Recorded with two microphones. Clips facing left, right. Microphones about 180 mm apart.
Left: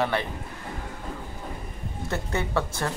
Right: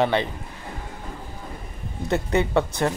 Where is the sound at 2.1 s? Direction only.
20° right (ahead or behind).